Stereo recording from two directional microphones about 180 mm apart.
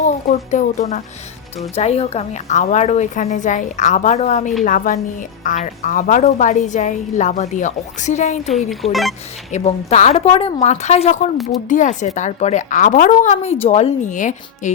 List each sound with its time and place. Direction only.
0.0 s a woman's voice: 40° left (ahead or behind)
8.4 s speech: centre (ahead or behind)
9.5 s a woman's voice: 40° left (ahead or behind)